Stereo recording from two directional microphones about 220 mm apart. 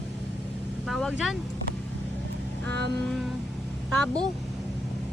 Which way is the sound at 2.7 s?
50° right (ahead or behind).